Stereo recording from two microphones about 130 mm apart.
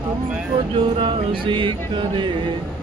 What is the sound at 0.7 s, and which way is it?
Music, 40° right (ahead or behind).